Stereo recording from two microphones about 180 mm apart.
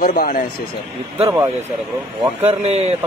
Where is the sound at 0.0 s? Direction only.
55° left (ahead or behind).